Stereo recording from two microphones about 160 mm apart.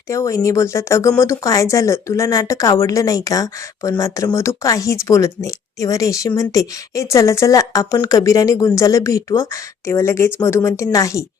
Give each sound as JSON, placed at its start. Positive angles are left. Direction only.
{"t": 0.1, "sound": "a woman's voice", "side_deg": 20}